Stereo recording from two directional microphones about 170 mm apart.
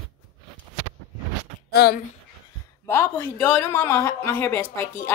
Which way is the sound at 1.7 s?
65° left (ahead or behind).